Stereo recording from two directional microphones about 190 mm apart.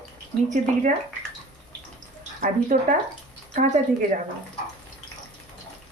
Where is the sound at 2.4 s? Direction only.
45° right (ahead or behind).